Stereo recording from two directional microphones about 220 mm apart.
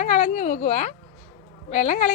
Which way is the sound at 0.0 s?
30° left (ahead or behind).